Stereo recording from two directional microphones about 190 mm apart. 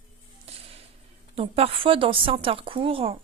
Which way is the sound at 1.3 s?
30° right (ahead or behind).